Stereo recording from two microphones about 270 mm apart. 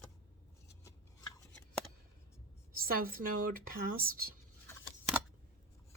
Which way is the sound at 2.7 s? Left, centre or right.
Right.